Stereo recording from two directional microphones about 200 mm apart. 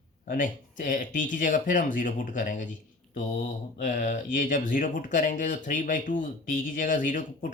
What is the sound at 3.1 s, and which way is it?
Mantra, 40° left (ahead or behind).